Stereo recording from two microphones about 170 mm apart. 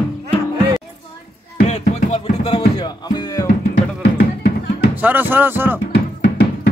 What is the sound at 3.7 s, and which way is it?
Music, 75° left (ahead or behind).